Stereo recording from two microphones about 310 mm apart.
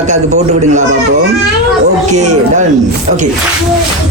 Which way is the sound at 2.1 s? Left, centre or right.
Right.